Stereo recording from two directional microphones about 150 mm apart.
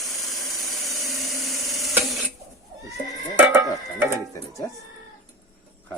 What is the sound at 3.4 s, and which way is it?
Music, 15° right (ahead or behind).